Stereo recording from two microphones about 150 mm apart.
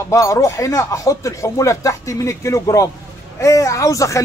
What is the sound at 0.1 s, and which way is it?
Speech, 20° left (ahead or behind).